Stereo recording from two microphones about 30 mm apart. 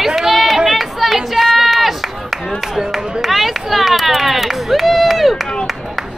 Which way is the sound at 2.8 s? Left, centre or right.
Right.